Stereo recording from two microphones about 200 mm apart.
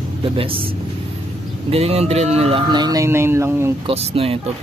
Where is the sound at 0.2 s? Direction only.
25° right (ahead or behind).